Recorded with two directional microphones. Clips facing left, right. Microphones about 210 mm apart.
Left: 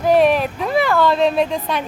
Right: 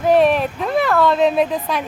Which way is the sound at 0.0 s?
Centre (ahead or behind).